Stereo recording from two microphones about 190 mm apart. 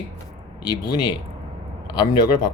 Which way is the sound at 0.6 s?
20° left (ahead or behind).